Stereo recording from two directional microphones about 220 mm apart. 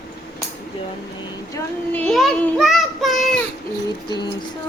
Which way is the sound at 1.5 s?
5° left (ahead or behind).